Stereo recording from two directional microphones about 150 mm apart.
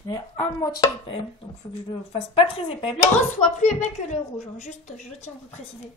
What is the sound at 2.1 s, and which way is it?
Speech, 40° left (ahead or behind).